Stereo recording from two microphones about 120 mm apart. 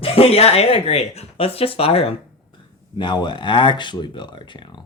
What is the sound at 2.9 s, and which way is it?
Speech, 40° left (ahead or behind).